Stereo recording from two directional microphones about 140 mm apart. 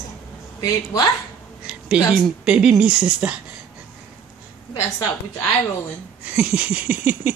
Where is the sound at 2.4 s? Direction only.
5° right (ahead or behind).